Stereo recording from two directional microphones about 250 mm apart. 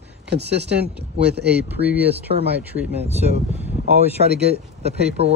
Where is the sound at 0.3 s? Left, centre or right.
Right.